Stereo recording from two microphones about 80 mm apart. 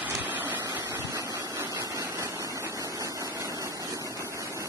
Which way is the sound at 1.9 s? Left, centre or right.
Right.